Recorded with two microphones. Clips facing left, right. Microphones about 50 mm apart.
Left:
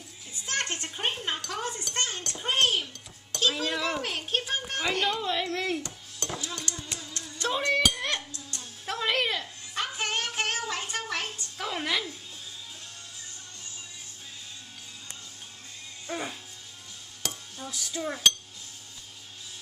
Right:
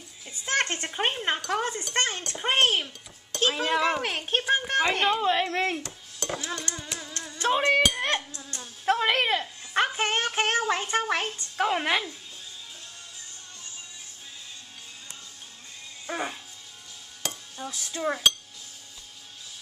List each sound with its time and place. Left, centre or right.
0.5 s a sound: right
1.5 s a child's voice: right
5.9 s dishes: centre
6.3 s speech: right
7.0 s a sound: right
16.1 s music: right
17.6 s a child's voice: right